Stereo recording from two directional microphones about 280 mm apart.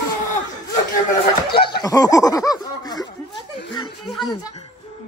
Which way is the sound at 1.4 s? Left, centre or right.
Centre.